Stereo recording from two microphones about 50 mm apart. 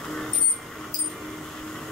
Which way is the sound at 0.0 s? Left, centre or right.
Centre.